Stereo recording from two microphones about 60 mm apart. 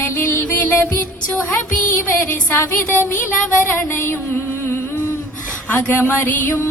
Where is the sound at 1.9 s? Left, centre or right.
Left.